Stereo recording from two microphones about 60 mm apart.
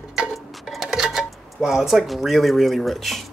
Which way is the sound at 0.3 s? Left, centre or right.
Centre.